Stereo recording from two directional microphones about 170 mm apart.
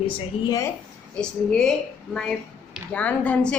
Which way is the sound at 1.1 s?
5° left (ahead or behind).